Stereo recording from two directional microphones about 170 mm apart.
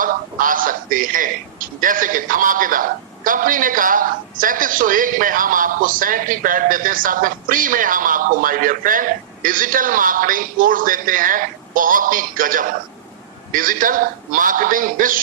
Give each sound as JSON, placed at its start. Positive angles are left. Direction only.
{"t": 0.0, "sound": "a man's voice", "side_deg": -55}